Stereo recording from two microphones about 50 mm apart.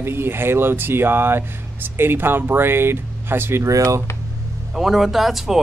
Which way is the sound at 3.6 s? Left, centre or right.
Right.